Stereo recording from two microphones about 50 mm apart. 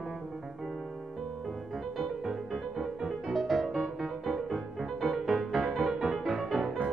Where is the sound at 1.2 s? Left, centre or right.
Centre.